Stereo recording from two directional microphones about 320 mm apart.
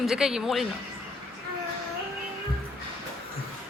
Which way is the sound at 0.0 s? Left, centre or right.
Centre.